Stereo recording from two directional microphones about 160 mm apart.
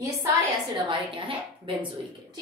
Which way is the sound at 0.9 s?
35° right (ahead or behind).